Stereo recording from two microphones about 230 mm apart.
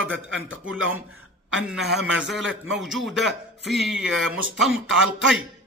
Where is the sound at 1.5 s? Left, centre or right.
Centre.